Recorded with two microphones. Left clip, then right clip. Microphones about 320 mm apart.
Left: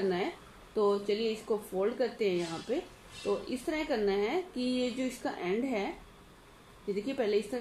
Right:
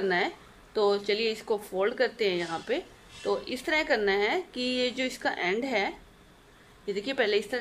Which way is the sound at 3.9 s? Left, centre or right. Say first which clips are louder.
Right 3 dB; right.